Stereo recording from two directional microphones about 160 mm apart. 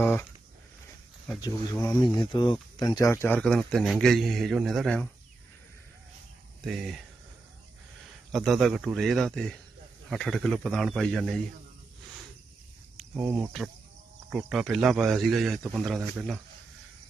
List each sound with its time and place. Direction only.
0.0 s a sound: 10° left (ahead or behind)
1.4 s speech: 20° left (ahead or behind); by 5.0 s centre (ahead or behind)
6.7 s speech: centre (ahead or behind)
8.3 s speech: centre (ahead or behind)
13.3 s speech: centre (ahead or behind)